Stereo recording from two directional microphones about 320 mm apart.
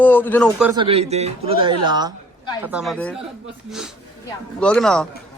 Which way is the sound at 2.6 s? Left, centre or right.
Centre.